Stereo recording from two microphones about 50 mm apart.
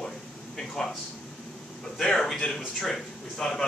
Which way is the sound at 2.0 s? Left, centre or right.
Centre.